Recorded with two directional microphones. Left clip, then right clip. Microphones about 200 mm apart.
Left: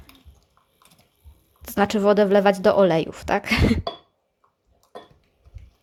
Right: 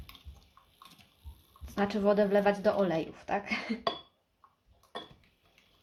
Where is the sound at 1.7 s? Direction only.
50° left (ahead or behind).